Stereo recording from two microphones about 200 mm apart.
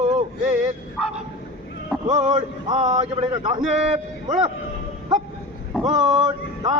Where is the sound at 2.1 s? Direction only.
35° right (ahead or behind).